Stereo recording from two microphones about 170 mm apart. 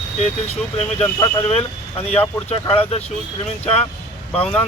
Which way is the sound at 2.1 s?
35° left (ahead or behind).